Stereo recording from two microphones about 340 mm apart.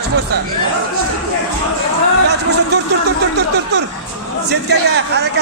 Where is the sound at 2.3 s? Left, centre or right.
Right.